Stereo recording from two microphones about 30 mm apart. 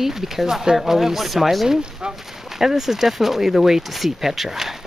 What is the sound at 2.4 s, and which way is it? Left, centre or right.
Speech, centre.